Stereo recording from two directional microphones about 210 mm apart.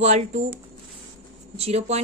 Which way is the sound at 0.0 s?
30° right (ahead or behind).